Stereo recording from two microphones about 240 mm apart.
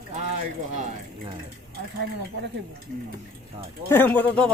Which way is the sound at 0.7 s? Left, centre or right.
Right.